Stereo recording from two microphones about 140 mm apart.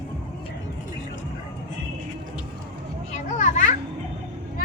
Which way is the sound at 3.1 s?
60° left (ahead or behind).